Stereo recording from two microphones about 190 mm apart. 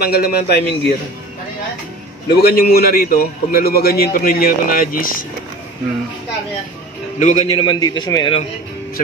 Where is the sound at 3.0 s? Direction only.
50° left (ahead or behind).